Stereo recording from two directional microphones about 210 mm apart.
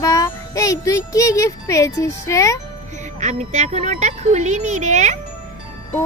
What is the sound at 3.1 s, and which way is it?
A woman's voice, 35° right (ahead or behind).